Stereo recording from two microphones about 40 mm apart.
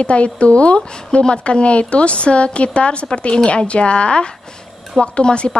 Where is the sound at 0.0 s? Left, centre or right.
Left.